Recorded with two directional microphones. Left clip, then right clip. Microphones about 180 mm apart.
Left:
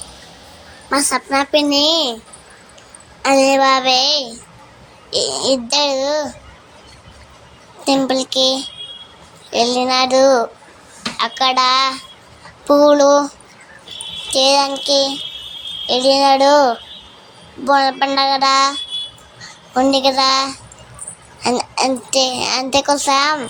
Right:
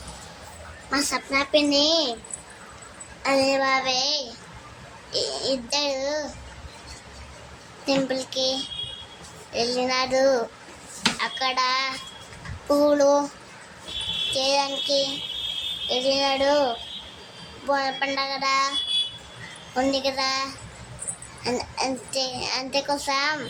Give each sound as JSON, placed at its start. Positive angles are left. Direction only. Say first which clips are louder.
{"t": 0.9, "sound": "a child's voice", "louder": "left 8 dB", "side_deg": 50}
{"t": 3.2, "sound": "a child's voice", "louder": "left 9 dB", "side_deg": 50}
{"t": 7.9, "sound": "child singing", "louder": "left 9 dB", "side_deg": 45}
{"t": 14.3, "sound": "child singing", "louder": "left 12 dB", "side_deg": 45}
{"t": 17.7, "sound": "a child's voice", "louder": "left 10 dB", "side_deg": 40}
{"t": 19.7, "sound": "a child's voice", "louder": "left 10 dB", "side_deg": 40}